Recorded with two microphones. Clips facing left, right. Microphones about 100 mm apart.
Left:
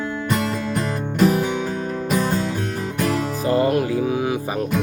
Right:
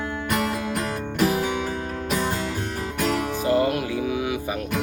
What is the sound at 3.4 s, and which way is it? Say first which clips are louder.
Music: left 4 dB; 35° left (ahead or behind).